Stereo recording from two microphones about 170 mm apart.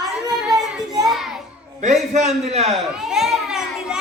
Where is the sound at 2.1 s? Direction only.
40° right (ahead or behind).